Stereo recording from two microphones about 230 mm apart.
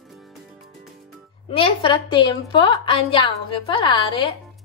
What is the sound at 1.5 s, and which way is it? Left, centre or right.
A woman's voice, left.